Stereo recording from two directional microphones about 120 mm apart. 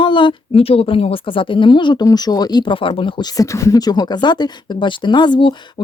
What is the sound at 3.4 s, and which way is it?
Speech, 25° left (ahead or behind).